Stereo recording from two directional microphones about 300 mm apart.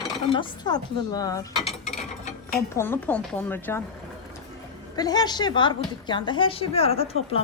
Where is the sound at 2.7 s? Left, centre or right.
Centre.